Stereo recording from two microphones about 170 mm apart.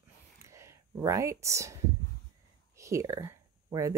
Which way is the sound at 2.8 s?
20° right (ahead or behind).